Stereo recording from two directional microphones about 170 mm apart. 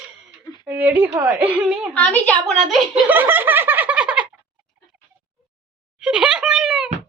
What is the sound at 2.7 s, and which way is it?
Giggle, 5° right (ahead or behind).